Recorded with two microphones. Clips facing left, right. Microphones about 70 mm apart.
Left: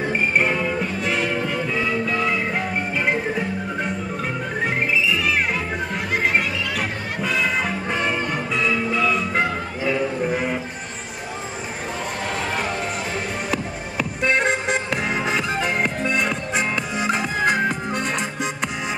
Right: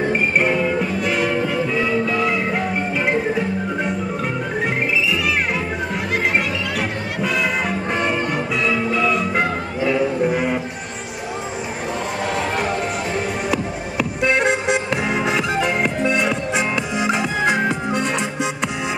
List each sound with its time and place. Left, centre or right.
0.1 s music: centre
4.6 s music: centre
12.4 s music: centre